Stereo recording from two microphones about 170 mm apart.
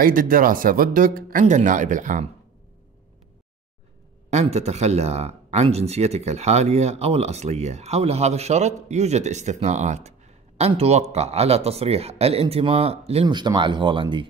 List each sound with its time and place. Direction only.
0.0 s speech: 55° right (ahead or behind)
4.3 s speech: 40° right (ahead or behind)